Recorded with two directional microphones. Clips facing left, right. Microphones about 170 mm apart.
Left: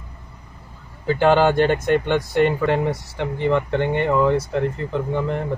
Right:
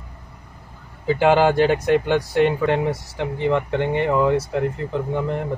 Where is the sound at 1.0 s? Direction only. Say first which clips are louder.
Even; 5° right (ahead or behind).